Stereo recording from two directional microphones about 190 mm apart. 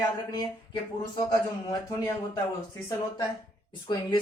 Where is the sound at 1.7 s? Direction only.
15° left (ahead or behind).